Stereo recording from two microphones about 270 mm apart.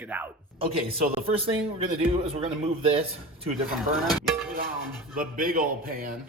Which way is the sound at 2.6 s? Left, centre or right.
Right.